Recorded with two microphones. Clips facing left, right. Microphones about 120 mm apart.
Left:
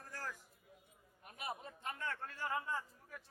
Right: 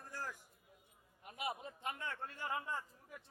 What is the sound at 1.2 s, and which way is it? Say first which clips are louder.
A man's voice: right 3 dB; 20° right (ahead or behind).